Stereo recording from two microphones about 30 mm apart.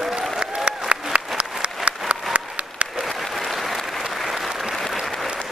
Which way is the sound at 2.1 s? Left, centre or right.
Right.